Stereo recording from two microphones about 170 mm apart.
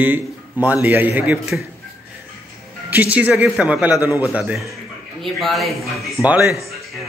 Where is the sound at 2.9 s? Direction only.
10° right (ahead or behind).